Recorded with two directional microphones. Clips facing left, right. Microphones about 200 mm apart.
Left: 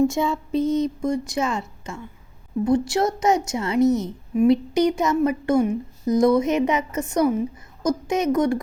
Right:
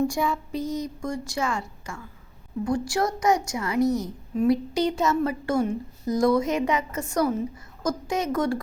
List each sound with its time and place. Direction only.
0.0 s a woman's voice: 25° left (ahead or behind)